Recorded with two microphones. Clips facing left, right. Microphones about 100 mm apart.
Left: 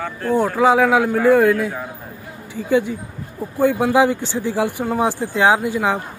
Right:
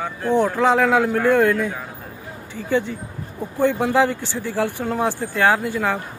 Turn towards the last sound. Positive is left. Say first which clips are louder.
# left 3 dB
turn(degrees=15)  # may be behind; listen again after turning